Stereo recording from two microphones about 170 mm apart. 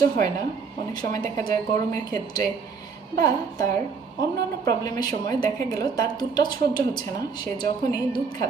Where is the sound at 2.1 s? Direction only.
20° left (ahead or behind).